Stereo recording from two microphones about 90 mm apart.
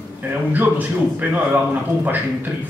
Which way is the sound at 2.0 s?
20° right (ahead or behind).